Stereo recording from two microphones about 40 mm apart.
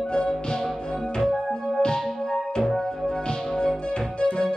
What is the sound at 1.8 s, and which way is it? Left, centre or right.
Music, centre.